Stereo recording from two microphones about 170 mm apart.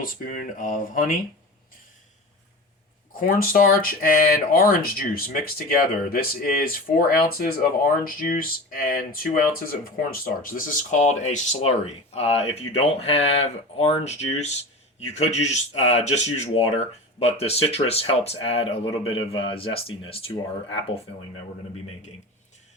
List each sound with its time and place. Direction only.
0.0 s speech: 50° left (ahead or behind)
3.1 s speech: 55° left (ahead or behind); by 20.3 s 35° left (ahead or behind)